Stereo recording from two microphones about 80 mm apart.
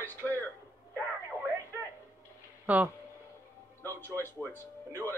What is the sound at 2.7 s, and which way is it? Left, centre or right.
Speech, centre.